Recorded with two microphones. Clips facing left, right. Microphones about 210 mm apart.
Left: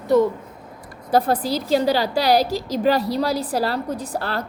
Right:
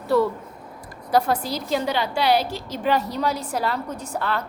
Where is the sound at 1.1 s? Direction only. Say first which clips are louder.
Left 2 dB; 35° left (ahead or behind).